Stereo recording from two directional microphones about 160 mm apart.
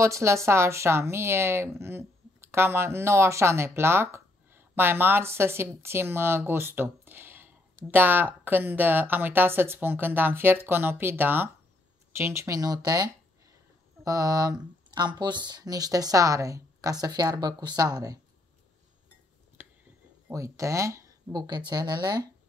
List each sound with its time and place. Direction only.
0.0 s a woman's voice: 20° right (ahead or behind)
19.6 s a sound: 15° right (ahead or behind)
20.2 s speech: 20° right (ahead or behind)